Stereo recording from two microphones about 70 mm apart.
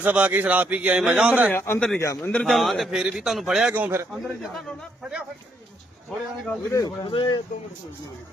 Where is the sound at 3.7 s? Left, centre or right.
Right.